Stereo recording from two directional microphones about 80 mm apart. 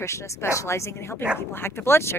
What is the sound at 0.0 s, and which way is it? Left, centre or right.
A woman's voice, left.